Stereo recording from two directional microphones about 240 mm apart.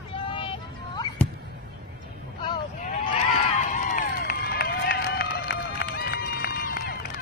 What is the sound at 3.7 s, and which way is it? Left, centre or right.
Run, left.